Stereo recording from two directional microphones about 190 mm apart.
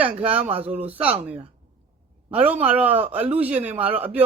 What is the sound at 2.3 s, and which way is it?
Speech, 10° right (ahead or behind).